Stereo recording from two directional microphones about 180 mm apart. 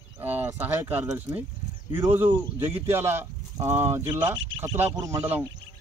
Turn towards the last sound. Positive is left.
turn(degrees=-15)  # may be behind; listen again after turning